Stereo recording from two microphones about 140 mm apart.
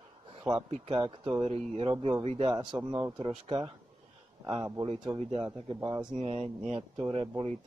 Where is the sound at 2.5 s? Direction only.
30° right (ahead or behind).